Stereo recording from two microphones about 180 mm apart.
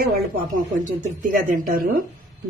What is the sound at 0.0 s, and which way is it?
A woman's voice, 55° right (ahead or behind).